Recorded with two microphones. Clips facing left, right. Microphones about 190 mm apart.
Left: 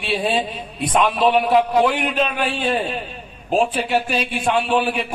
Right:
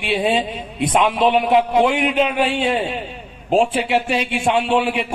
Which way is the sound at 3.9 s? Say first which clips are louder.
Right 2 dB; 25° right (ahead or behind).